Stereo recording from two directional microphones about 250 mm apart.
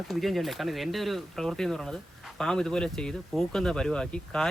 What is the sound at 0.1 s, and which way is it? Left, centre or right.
Speech, centre.